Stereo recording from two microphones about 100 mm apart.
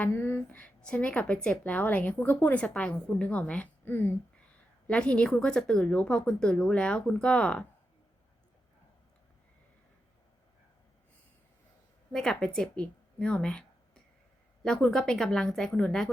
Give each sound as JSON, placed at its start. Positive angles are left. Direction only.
{"t": 0.0, "sound": "speech", "side_deg": 20}
{"t": 0.6, "sound": "speech", "side_deg": 10}
{"t": 12.1, "sound": "a woman's voice", "side_deg": 5}
{"t": 12.7, "sound": "a sound", "side_deg": 10}
{"t": 14.6, "sound": "a woman's voice", "side_deg": 5}